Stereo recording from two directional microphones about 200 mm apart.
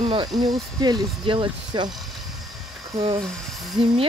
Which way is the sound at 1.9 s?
Centre (ahead or behind).